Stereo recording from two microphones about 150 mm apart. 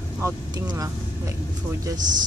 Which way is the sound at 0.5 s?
25° right (ahead or behind).